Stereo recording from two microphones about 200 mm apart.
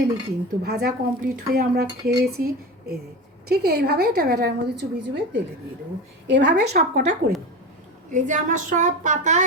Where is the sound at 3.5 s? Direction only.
55° right (ahead or behind).